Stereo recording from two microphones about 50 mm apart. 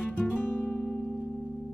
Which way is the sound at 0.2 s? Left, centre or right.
Left.